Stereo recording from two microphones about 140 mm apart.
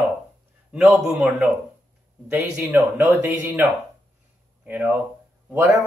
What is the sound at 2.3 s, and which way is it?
Speech, 10° right (ahead or behind).